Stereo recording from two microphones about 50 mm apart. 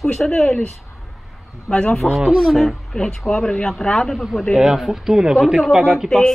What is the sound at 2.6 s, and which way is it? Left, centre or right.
Speech, centre.